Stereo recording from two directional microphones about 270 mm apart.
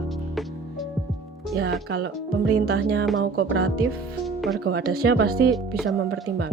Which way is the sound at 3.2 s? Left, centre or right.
Right.